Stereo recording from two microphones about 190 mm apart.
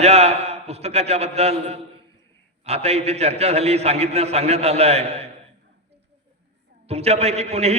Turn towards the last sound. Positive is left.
turn(degrees=-35)  # may be behind; listen again after turning